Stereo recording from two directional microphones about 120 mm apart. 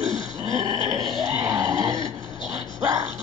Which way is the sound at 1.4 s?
30° right (ahead or behind).